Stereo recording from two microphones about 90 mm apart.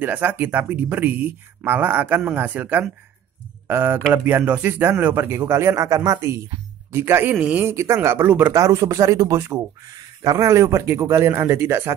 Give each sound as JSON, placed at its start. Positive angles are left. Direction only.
{"t": 0.0, "sound": "speech", "side_deg": -20}
{"t": 8.5, "sound": "speech", "side_deg": -35}